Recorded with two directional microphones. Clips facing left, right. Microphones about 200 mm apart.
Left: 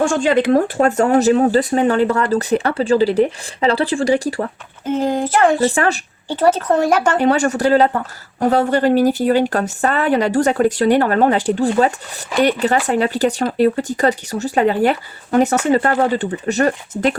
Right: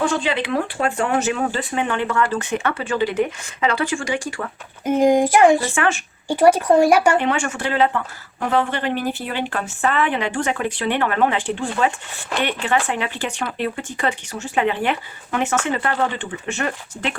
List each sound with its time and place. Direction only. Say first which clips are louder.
0.0 s a woman's voice: left 6 dB; 45° left (ahead or behind)
4.9 s speech: right 3 dB; 15° right (ahead or behind)
5.6 s a woman's voice: left 5 dB; 35° left (ahead or behind)
6.2 s speech: right 1 dB; 10° right (ahead or behind)
7.2 s a woman's voice: left 7 dB; 40° left (ahead or behind)